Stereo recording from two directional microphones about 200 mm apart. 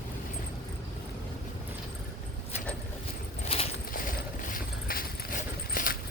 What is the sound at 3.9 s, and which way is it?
Mechanisms, 45° left (ahead or behind).